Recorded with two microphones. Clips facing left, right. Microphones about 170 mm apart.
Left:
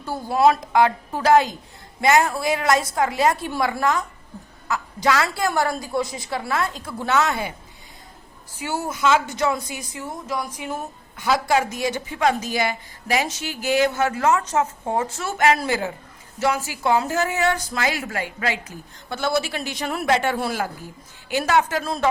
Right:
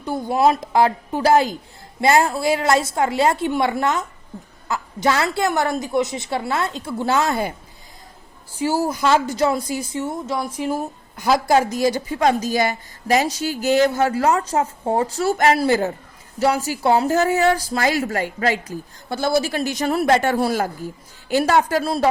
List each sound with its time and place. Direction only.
0.0 s a woman's voice: 20° right (ahead or behind)
5.0 s a woman's voice: 25° right (ahead or behind)
8.6 s a woman's voice: 35° right (ahead or behind)